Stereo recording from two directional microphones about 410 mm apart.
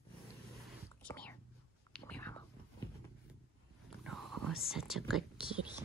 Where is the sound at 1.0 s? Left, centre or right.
Centre.